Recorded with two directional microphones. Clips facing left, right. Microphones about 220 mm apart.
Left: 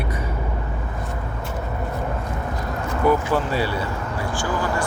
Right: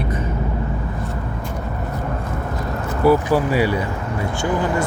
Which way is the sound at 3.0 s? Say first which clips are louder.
Right 4 dB; 10° right (ahead or behind).